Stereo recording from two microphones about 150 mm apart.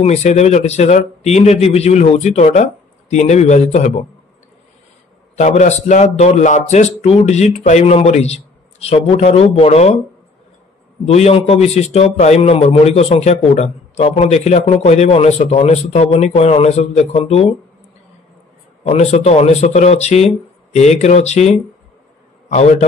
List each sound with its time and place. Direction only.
0.0 s speech: 50° left (ahead or behind)
5.3 s speech: 50° left (ahead or behind)
11.1 s speech: 45° left (ahead or behind)
18.9 s speech: 45° left (ahead or behind)